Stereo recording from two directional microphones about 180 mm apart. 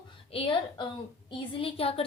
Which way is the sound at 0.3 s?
30° left (ahead or behind).